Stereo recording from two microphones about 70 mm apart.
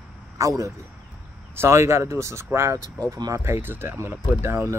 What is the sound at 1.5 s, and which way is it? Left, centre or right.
Speech, right.